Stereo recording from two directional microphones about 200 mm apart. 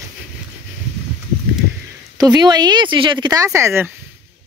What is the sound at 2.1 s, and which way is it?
Speech, 20° right (ahead or behind).